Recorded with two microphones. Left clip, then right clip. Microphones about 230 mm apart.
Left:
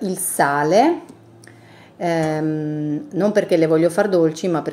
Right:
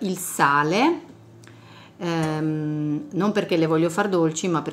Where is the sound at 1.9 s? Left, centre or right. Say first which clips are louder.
Left 7 dB; right.